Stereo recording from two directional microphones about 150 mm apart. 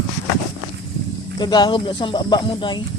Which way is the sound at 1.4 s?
30° left (ahead or behind).